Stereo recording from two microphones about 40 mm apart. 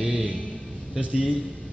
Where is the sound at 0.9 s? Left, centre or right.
Right.